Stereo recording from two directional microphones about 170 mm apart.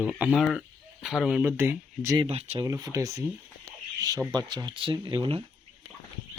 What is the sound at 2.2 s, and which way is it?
Speech, 35° right (ahead or behind).